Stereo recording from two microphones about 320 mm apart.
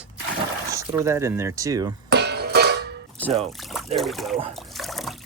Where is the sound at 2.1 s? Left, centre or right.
Right.